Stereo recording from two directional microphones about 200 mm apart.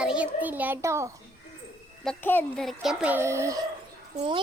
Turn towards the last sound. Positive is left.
turn(degrees=-25)  # may be behind; listen again after turning